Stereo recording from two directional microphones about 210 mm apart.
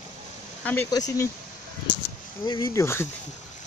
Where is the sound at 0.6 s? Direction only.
10° left (ahead or behind).